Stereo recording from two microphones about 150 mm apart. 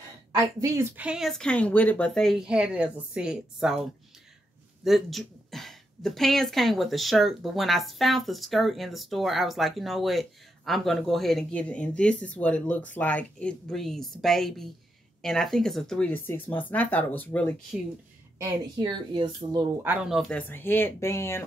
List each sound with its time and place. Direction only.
0.4 s a woman's voice: 20° right (ahead or behind); by 3.8 s 5° right (ahead or behind)
4.8 s a woman's voice: centre (ahead or behind)
18.4 s speech: 30° right (ahead or behind)
19.8 s speech: 10° right (ahead or behind); by 21.5 s 15° left (ahead or behind)